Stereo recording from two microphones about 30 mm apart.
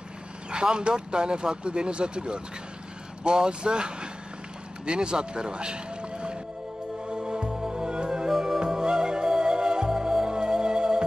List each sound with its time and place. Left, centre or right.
0.5 s speech: right
7.1 s music: right
8.3 s music: centre
8.5 s music: right